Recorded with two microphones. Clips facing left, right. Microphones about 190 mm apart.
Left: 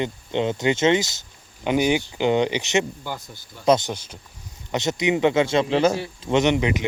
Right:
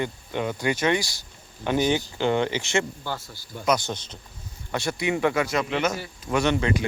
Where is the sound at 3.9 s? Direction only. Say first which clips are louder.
Left 1 dB; 10° left (ahead or behind).